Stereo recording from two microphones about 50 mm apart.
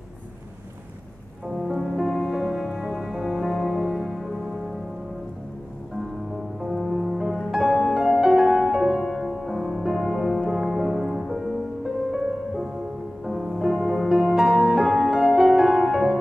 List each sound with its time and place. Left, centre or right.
1.5 s music: centre
6.9 s music: centre
9.0 s music: centre
10.0 s music: centre